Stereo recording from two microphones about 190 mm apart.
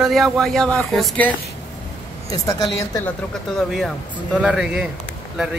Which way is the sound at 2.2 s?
20° left (ahead or behind).